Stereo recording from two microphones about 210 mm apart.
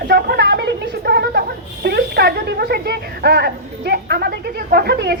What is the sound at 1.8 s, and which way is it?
Speech, 50° right (ahead or behind).